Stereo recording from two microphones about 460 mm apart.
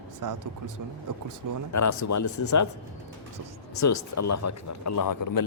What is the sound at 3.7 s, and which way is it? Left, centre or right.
Speech, left.